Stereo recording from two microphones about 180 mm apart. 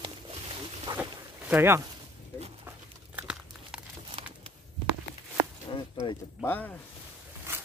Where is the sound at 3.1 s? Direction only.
5° right (ahead or behind).